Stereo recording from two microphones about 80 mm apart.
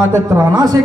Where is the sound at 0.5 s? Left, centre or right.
Right.